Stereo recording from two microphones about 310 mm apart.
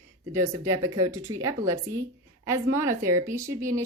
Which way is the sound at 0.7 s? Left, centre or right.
Centre.